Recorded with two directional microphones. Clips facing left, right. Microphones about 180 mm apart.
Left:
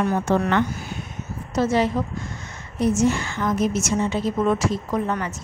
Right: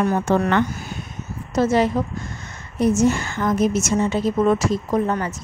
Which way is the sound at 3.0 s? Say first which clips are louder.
Right 2 dB; 45° right (ahead or behind).